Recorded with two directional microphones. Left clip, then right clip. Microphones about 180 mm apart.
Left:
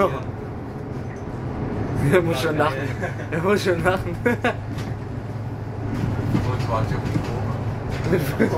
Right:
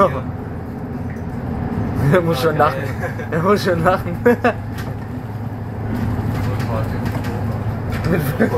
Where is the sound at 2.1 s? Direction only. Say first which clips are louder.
Right 4 dB; 10° left (ahead or behind).